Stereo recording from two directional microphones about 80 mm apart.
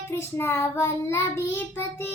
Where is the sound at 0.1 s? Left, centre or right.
Left.